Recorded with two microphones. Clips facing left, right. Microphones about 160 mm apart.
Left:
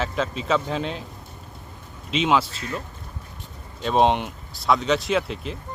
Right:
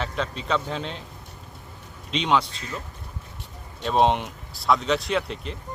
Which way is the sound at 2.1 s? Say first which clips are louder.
Left 2 dB; 5° left (ahead or behind).